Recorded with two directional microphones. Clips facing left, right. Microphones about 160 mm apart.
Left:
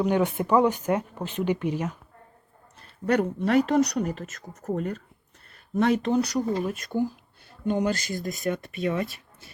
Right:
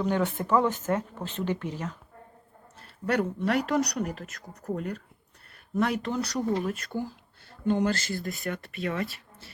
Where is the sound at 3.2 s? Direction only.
20° left (ahead or behind).